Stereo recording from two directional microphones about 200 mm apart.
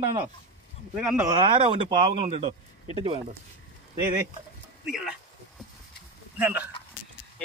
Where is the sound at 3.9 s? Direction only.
20° right (ahead or behind).